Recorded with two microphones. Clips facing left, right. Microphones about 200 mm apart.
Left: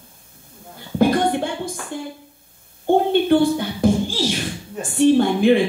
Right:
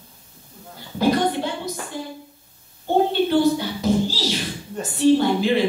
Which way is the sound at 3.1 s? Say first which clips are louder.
Left 2 dB; 55° left (ahead or behind).